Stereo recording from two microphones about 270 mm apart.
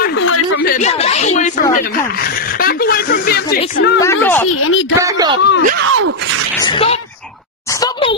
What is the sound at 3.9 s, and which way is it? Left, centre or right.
Speech, centre.